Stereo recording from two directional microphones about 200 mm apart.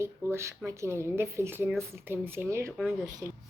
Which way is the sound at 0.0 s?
15° right (ahead or behind).